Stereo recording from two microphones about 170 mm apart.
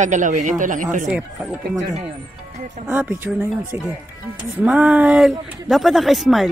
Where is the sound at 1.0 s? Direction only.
5° right (ahead or behind).